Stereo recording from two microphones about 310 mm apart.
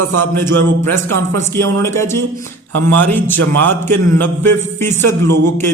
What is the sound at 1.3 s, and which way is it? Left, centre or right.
A man's voice, centre.